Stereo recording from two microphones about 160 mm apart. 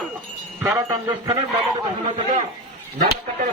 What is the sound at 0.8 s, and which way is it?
Speech, 20° right (ahead or behind).